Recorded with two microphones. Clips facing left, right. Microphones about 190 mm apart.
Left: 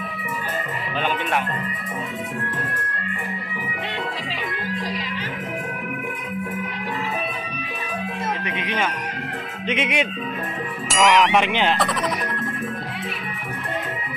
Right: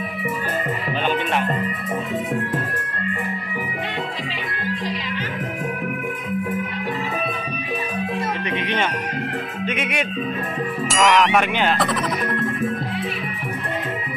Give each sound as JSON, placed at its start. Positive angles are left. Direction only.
{"t": 8.5, "sound": "speech", "side_deg": 5}
{"t": 9.7, "sound": "music", "side_deg": 20}
{"t": 10.9, "sound": "speech", "side_deg": 0}
{"t": 11.3, "sound": "speech", "side_deg": 20}